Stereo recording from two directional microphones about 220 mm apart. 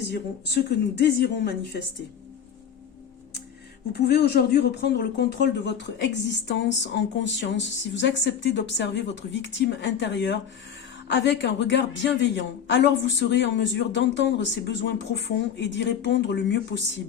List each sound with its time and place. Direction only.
0.1 s speech: 50° left (ahead or behind)
3.9 s speech: 45° left (ahead or behind)